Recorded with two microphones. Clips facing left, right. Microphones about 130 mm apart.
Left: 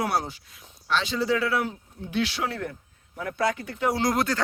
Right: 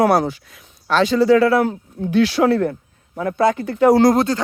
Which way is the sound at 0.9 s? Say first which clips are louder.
Right 11 dB; 45° right (ahead or behind).